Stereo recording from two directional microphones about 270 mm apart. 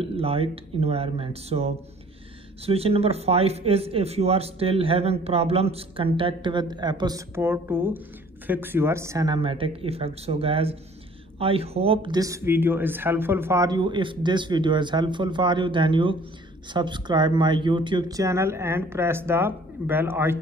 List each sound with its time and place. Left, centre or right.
0.0 s speech: right